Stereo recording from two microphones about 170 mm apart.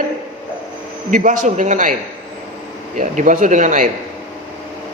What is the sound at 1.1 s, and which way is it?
Speech, 50° right (ahead or behind).